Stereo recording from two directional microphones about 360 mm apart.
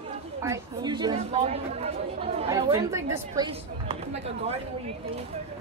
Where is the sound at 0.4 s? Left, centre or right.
Centre.